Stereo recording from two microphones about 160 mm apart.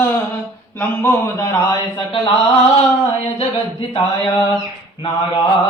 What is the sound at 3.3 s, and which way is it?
Speech, 35° left (ahead or behind).